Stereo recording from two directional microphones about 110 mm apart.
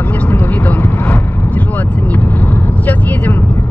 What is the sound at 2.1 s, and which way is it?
Vehicle, 15° left (ahead or behind).